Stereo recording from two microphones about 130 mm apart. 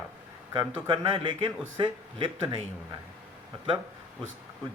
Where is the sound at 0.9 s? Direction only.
40° right (ahead or behind).